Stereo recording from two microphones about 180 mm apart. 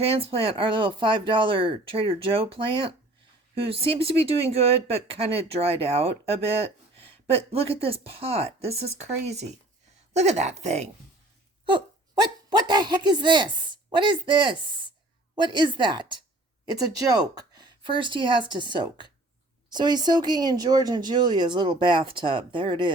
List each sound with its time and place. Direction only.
0.0 s speech: 35° right (ahead or behind)
12.2 s speech: 25° right (ahead or behind)